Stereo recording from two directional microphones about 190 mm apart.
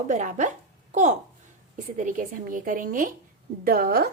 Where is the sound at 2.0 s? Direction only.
45° right (ahead or behind).